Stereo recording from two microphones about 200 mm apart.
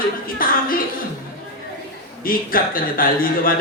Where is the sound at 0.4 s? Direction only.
45° left (ahead or behind).